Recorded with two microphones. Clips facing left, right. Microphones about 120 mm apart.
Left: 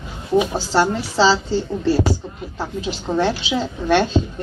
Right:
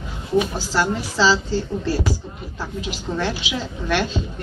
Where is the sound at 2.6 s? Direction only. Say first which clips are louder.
Left 4 dB; 30° left (ahead or behind).